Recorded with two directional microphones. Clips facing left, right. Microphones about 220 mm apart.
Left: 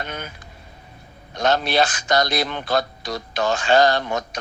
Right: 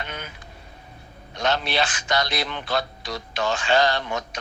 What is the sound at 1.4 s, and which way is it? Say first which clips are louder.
A man's voice: left 5 dB; 40° left (ahead or behind).